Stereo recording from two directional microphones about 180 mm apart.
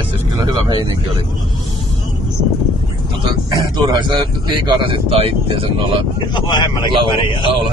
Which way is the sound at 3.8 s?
25° right (ahead or behind).